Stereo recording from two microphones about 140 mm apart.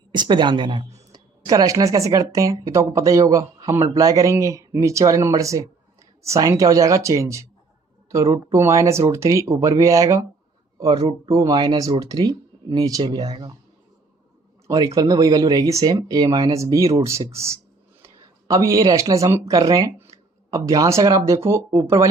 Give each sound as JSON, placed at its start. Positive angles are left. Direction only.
{"t": 0.1, "sound": "a woman's voice", "side_deg": -35}
{"t": 14.7, "sound": "speech", "side_deg": -25}